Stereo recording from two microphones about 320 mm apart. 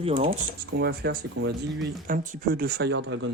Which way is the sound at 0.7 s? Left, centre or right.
Right.